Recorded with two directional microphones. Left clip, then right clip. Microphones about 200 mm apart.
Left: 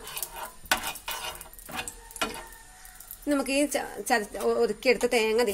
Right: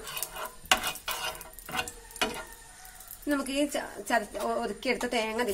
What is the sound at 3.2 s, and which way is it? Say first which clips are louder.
Speech: left 3 dB; 40° left (ahead or behind).